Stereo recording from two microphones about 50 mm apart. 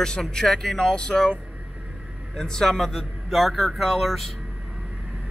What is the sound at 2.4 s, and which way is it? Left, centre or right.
Speech, centre.